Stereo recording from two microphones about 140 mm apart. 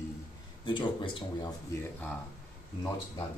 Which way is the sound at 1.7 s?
15° left (ahead or behind).